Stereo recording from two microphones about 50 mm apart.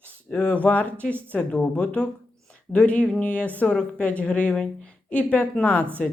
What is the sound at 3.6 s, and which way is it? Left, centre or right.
Speech, centre.